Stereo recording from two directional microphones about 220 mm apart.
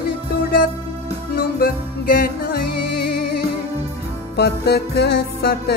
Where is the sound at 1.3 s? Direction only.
40° left (ahead or behind).